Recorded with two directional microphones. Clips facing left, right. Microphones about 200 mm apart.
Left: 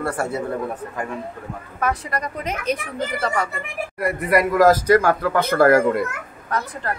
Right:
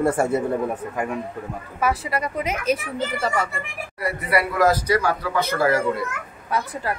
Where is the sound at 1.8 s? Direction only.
5° right (ahead or behind).